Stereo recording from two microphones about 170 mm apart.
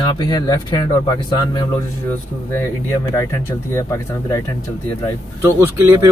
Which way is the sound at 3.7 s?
15° left (ahead or behind).